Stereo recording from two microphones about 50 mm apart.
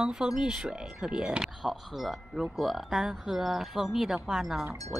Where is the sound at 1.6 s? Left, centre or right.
Centre.